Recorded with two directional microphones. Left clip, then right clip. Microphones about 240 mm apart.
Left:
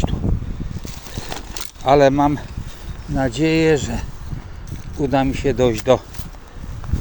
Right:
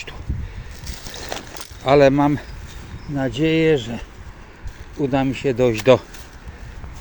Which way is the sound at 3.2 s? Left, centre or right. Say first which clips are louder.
Left 1 dB; centre.